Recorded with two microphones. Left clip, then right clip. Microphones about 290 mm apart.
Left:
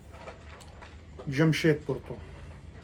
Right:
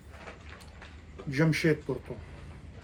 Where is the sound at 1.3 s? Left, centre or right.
Centre.